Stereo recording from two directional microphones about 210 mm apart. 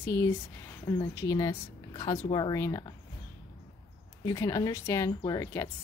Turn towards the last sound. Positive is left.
turn(degrees=15)  # may be behind; listen again after turning